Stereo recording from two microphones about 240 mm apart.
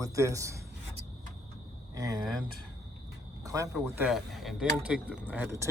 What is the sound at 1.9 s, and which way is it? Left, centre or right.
Speech, centre.